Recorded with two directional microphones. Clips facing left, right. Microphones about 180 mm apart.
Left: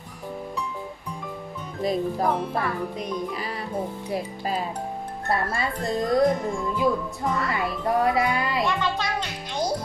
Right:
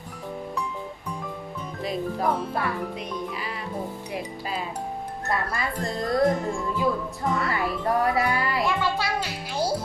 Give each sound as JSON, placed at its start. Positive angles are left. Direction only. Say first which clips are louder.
{"t": 1.8, "sound": "speech", "louder": "left 4 dB", "side_deg": 40}
{"t": 2.2, "sound": "speech", "louder": "left 1 dB", "side_deg": 0}
{"t": 4.1, "sound": "a child's voice", "louder": "left 6 dB", "side_deg": 35}
{"t": 7.3, "sound": "speech", "louder": "even", "side_deg": 0}
{"t": 7.5, "sound": "a child's voice", "louder": "even", "side_deg": 20}
{"t": 8.6, "sound": "music", "louder": "even", "side_deg": -5}